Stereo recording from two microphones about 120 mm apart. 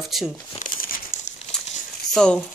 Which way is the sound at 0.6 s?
90° left.